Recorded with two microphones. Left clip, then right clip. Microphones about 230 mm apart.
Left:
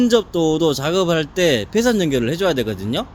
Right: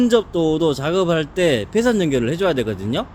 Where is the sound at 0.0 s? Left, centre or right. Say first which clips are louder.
Even; centre.